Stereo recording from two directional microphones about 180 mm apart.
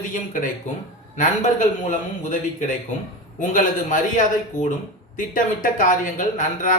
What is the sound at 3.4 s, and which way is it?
Speech, 45° left (ahead or behind).